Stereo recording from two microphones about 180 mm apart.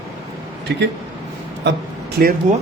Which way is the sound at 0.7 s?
70° right (ahead or behind).